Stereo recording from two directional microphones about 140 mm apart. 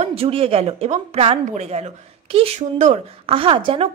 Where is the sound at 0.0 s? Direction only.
45° right (ahead or behind).